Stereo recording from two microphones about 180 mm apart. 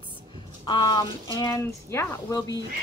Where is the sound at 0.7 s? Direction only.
25° left (ahead or behind).